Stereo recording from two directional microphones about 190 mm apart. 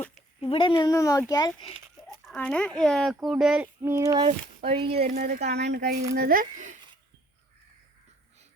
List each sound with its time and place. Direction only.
0.0 s a sound: centre (ahead or behind)
0.5 s speech: 25° left (ahead or behind)
2.2 s speech: 5° left (ahead or behind); by 4.3 s 15° right (ahead or behind)
4.3 s speech: 30° right (ahead or behind)
5.1 s speech: 55° right (ahead or behind)
6.1 s speech: 50° right (ahead or behind)